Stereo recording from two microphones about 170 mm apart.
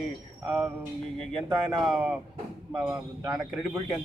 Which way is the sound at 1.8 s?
Centre (ahead or behind).